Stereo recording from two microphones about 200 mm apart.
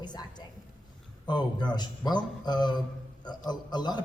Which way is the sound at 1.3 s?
20° left (ahead or behind).